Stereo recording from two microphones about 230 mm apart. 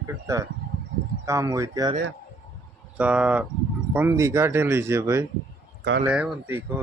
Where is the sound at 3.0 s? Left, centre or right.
Centre.